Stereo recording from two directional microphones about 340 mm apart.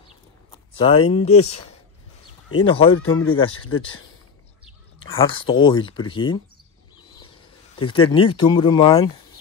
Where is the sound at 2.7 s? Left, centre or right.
Centre.